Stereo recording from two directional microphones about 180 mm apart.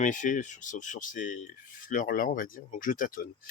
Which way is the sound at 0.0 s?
45° left (ahead or behind).